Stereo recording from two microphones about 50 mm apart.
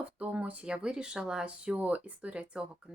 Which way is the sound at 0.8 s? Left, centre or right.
Centre.